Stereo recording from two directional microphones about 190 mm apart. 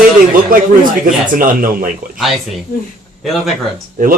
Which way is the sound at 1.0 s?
45° right (ahead or behind).